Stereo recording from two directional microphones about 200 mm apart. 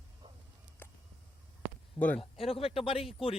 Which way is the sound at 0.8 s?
10° left (ahead or behind).